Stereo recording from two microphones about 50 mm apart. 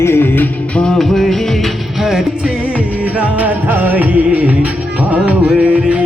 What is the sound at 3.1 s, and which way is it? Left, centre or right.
Music, right.